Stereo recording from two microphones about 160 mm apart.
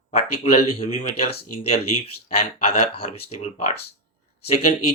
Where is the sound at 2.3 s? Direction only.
45° left (ahead or behind).